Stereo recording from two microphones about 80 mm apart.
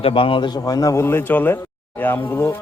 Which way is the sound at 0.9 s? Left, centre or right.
Left.